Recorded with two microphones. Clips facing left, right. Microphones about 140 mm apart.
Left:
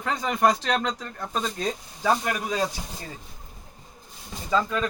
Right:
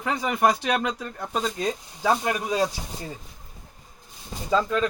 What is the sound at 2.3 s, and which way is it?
Speech, 20° right (ahead or behind).